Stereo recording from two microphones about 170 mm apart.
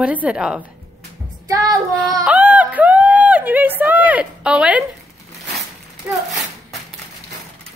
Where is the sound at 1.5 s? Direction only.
20° right (ahead or behind).